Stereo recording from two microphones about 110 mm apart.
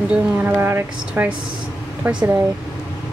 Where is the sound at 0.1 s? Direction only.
15° right (ahead or behind).